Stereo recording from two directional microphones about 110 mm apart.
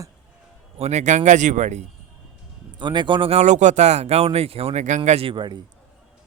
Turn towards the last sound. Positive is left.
turn(degrees=-45)  # may be behind; listen again after turning